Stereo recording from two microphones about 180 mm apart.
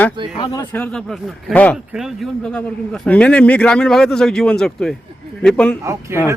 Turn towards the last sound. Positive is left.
turn(degrees=-15)  # may be behind; listen again after turning